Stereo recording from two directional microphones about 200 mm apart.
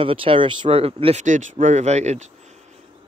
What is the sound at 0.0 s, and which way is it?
Speech, 25° right (ahead or behind).